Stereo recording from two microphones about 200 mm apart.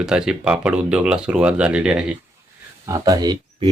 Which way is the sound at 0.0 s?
5° right (ahead or behind).